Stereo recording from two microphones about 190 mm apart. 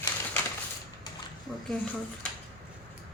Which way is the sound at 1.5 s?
5° left (ahead or behind).